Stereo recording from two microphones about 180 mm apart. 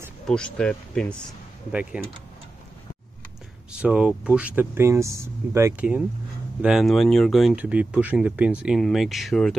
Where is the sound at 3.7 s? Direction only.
5° right (ahead or behind).